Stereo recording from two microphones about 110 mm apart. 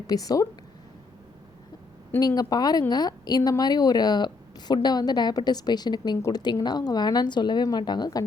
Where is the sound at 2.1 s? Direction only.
35° left (ahead or behind).